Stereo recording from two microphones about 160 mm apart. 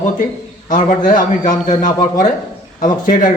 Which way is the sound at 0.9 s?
55° left (ahead or behind).